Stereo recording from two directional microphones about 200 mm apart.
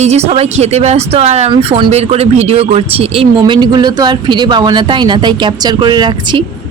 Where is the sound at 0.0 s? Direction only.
30° right (ahead or behind).